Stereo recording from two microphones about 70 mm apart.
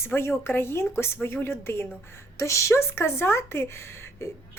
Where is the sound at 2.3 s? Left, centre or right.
Left.